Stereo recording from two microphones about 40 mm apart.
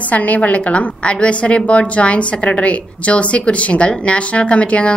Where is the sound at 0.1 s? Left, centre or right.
Left.